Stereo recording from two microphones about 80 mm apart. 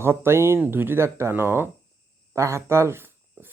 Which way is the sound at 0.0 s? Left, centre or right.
Right.